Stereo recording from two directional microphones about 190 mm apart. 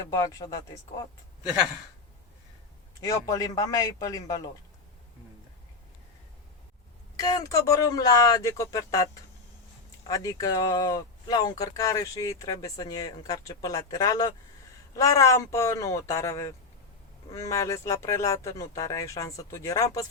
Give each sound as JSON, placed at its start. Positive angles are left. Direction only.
{"t": 0.3, "sound": "speech", "side_deg": 20}
{"t": 3.0, "sound": "speech", "side_deg": 20}
{"t": 7.2, "sound": "speech", "side_deg": 20}
{"t": 10.1, "sound": "speech", "side_deg": 20}